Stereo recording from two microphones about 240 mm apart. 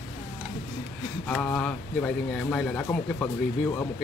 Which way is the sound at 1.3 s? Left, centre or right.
Centre.